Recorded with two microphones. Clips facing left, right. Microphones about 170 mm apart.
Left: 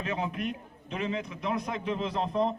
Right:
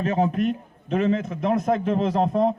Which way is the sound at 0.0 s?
45° right (ahead or behind).